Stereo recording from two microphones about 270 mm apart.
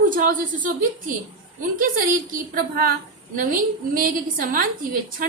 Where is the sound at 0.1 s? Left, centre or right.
Right.